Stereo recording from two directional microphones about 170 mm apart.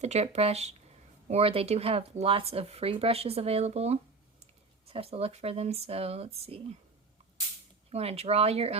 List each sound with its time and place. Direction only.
0.0 s speech: 40° right (ahead or behind)
7.9 s speech: 35° right (ahead or behind)